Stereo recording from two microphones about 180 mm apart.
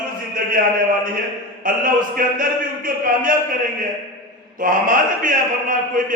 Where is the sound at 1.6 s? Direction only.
50° right (ahead or behind).